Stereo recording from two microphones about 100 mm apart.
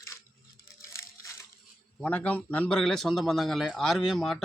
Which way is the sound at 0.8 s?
30° left (ahead or behind).